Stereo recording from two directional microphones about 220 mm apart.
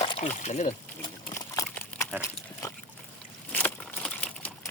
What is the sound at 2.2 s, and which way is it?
Pig, 15° left (ahead or behind).